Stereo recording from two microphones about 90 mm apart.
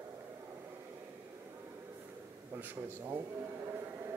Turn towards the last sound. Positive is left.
turn(degrees=-25)  # may be behind; listen again after turning